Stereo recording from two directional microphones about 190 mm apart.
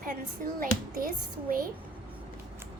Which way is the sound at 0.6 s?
50° right (ahead or behind).